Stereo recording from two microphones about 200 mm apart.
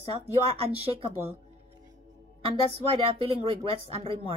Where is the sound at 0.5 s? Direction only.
30° right (ahead or behind).